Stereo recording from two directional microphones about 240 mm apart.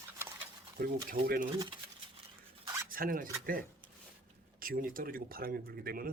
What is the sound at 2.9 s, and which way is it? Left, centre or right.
Speech, right.